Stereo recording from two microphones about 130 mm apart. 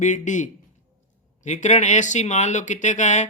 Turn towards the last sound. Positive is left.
turn(degrees=65)  # may be behind; listen again after turning